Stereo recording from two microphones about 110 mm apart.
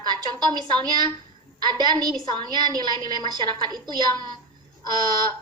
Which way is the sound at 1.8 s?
40° right (ahead or behind).